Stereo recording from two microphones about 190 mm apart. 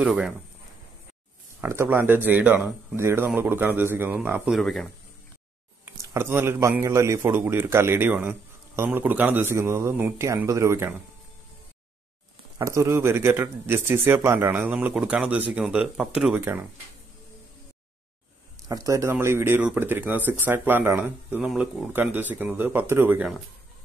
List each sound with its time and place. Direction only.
0.0 s speech: 5° right (ahead or behind)
1.6 s a man's voice: 10° right (ahead or behind)
4.6 s speech: centre (ahead or behind)
6.1 s a man's voice: 10° right (ahead or behind)
12.5 s a man's voice: 15° right (ahead or behind)
18.7 s a man's voice: 15° right (ahead or behind)